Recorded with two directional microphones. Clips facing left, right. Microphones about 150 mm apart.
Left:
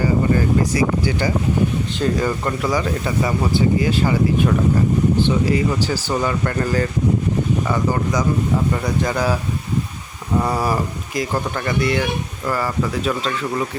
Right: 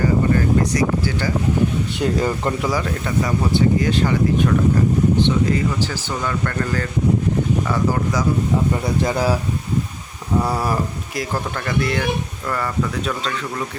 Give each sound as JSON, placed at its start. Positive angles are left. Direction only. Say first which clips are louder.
{"t": 0.6, "sound": "speech", "louder": "left 1 dB", "side_deg": 5}
{"t": 2.0, "sound": "speech", "louder": "even", "side_deg": -20}
{"t": 2.6, "sound": "speech", "louder": "left 2 dB", "side_deg": 0}
{"t": 9.0, "sound": "speech", "louder": "right 2 dB", "side_deg": -30}
{"t": 10.4, "sound": "speech", "louder": "left 3 dB", "side_deg": 0}